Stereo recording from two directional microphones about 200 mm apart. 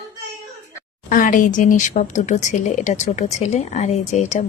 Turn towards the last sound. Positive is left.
turn(degrees=35)  # may be behind; listen again after turning